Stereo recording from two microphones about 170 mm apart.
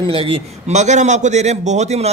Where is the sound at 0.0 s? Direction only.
30° right (ahead or behind).